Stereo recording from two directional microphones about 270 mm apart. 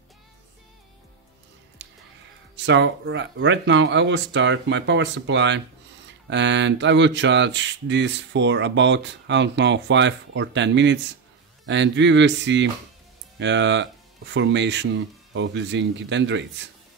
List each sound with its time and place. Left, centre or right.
1.8 s music: right
2.5 s speech: right